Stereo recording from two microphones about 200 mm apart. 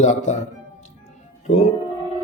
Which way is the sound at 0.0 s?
35° left (ahead or behind).